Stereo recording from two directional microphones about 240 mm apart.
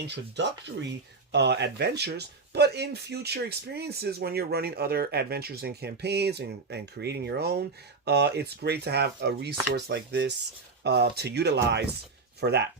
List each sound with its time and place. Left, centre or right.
0.1 s speech: right